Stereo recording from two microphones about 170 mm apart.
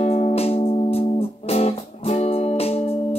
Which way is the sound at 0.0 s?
35° left (ahead or behind).